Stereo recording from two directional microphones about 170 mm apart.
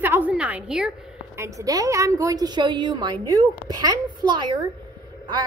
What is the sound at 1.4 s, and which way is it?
A woman's voice, 20° right (ahead or behind).